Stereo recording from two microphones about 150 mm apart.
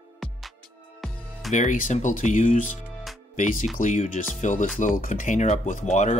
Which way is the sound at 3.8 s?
55° left (ahead or behind).